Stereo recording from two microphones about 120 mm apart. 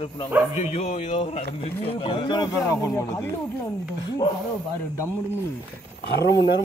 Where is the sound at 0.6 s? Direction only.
65° left (ahead or behind); by 3.3 s 25° left (ahead or behind).